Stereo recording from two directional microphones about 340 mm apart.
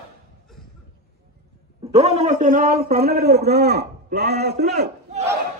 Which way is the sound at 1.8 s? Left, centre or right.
Centre.